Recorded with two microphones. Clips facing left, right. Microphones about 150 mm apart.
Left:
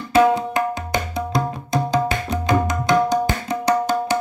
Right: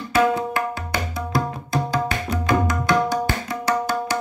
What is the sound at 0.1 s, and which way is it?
Tabla, 20° left (ahead or behind).